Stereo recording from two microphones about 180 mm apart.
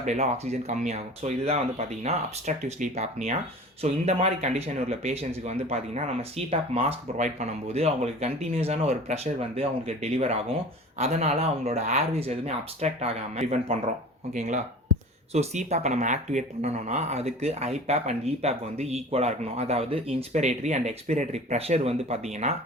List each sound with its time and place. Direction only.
0.0 s speech: 40° right (ahead or behind)